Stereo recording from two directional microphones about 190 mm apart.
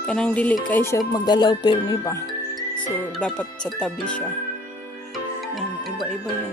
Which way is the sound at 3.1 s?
5° left (ahead or behind).